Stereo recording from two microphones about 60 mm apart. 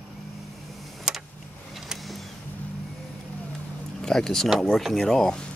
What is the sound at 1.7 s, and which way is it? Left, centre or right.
Vehicle, centre.